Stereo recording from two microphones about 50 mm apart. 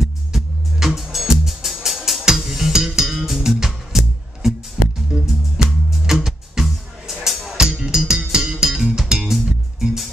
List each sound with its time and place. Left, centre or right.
0.0 s music: centre